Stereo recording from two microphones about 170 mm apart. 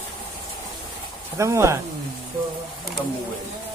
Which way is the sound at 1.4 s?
15° right (ahead or behind).